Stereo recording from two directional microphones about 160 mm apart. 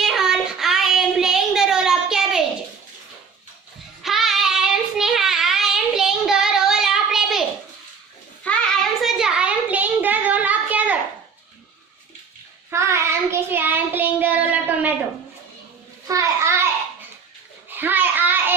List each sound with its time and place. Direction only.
0.0 s child singing: centre (ahead or behind)
4.0 s child singing: centre (ahead or behind)
8.4 s child singing: centre (ahead or behind)
12.7 s child singing: 15° right (ahead or behind)
16.0 s a sound: 20° right (ahead or behind)
17.7 s child singing: 10° right (ahead or behind)